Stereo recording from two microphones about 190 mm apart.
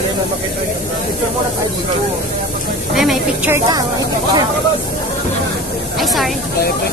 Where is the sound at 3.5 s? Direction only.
20° right (ahead or behind).